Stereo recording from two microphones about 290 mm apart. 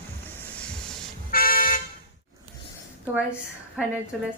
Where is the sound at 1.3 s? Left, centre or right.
Left.